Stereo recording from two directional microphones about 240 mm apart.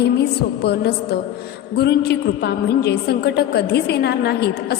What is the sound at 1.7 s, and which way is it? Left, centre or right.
A woman's voice, left.